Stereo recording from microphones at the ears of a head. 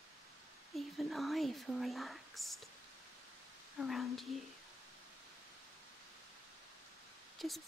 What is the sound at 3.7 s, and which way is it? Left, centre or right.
Speech, left.